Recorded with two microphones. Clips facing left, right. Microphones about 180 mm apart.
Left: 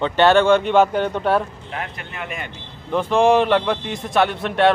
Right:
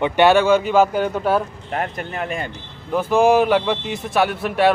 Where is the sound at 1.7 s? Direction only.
45° right (ahead or behind).